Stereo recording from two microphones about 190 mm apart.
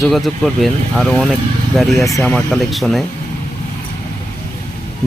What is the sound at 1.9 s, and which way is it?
Speech, 15° left (ahead or behind).